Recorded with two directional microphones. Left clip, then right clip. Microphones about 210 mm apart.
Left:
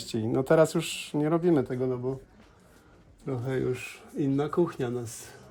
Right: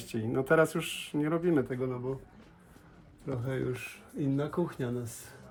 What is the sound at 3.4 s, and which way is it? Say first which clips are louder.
Speech: left 6 dB; 40° left (ahead or behind).